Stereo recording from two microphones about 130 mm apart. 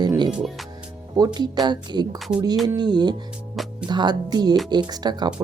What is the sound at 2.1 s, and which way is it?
Speech, centre (ahead or behind).